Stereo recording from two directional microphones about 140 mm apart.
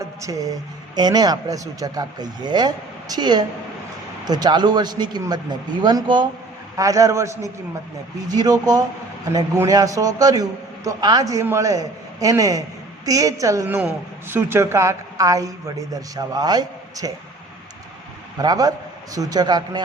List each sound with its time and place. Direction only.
0.0 s a sound: 25° right (ahead or behind)
0.9 s a man's voice: 30° right (ahead or behind)
13.7 s a man's voice: 15° right (ahead or behind); by 17.1 s 30° right (ahead or behind)
18.3 s a man's voice: 25° right (ahead or behind)